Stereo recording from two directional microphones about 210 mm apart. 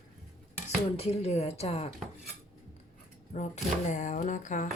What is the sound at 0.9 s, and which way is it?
Speech, 30° left (ahead or behind).